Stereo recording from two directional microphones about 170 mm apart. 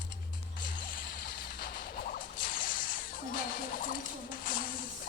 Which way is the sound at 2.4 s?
55° left (ahead or behind).